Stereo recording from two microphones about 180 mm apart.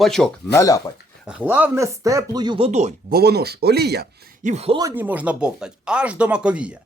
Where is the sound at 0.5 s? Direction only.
20° left (ahead or behind).